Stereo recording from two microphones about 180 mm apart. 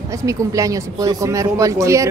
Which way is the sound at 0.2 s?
20° right (ahead or behind).